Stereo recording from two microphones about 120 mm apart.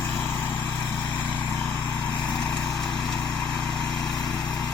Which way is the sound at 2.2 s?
5° left (ahead or behind).